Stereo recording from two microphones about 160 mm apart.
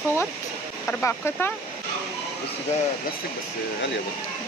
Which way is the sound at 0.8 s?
15° left (ahead or behind).